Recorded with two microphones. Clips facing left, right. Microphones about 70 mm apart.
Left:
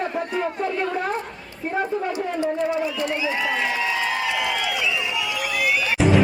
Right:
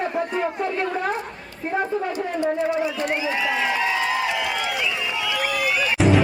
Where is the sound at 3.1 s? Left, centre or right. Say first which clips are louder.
Even; right.